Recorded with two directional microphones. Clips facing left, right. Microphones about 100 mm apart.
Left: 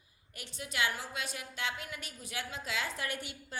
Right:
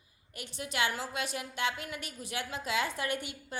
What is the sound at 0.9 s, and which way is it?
A woman's voice, 80° right.